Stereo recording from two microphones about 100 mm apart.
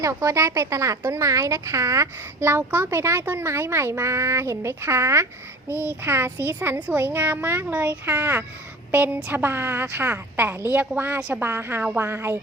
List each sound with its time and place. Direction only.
0.0 s a woman's voice: 30° right (ahead or behind)